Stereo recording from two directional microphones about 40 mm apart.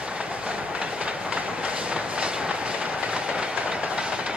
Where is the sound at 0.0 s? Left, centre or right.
Right.